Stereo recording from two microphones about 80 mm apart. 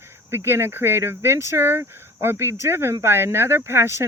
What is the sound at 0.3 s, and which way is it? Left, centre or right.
Speech, right.